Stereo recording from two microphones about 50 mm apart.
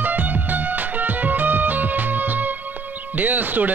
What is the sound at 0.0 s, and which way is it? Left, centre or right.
Music, right.